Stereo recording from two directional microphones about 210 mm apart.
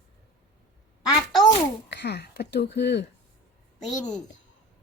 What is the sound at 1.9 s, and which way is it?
Speech, 55° left (ahead or behind).